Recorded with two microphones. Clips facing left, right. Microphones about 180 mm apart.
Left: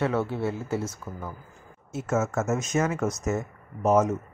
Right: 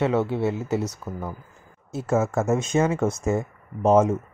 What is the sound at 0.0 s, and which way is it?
Speech, 20° right (ahead or behind).